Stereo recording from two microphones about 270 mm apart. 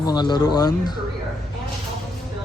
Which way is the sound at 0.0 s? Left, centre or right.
Centre.